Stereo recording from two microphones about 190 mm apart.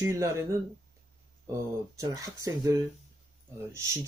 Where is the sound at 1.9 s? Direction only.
15° right (ahead or behind).